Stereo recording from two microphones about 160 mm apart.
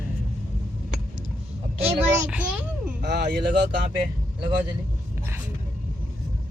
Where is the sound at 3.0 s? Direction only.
90° right.